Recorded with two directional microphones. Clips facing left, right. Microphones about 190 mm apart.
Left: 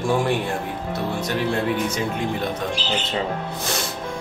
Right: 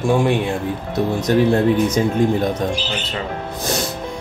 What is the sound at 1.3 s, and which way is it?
Speech, 40° right (ahead or behind).